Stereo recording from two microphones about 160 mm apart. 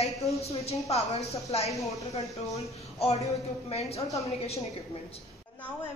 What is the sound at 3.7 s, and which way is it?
Speech, 40° left (ahead or behind).